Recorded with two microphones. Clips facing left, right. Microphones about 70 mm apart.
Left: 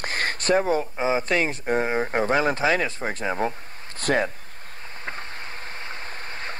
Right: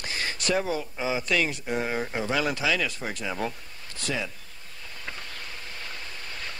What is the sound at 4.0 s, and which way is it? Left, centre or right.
Speech, left.